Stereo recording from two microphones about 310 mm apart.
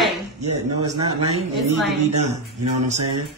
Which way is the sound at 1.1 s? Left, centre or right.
Right.